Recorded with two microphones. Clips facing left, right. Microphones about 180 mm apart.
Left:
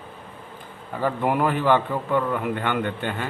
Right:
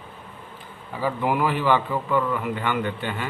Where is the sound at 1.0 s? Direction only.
50° left (ahead or behind).